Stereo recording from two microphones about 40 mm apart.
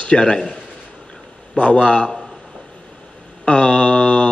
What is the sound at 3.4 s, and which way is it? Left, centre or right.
Mantra, left.